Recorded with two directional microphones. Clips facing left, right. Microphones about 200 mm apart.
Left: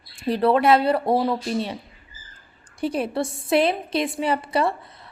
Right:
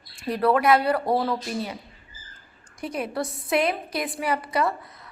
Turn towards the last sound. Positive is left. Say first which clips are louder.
# left 3 dB
turn(degrees=30)  # may be behind; listen again after turning